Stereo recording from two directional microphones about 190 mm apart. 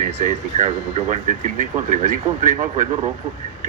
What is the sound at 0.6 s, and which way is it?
Speech, 40° right (ahead or behind).